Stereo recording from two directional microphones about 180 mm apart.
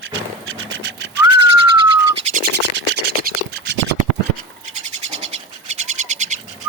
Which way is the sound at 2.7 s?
75° right (ahead or behind).